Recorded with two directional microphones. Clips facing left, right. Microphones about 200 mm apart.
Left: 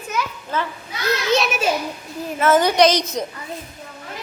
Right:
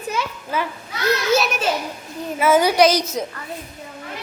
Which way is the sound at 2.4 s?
10° right (ahead or behind).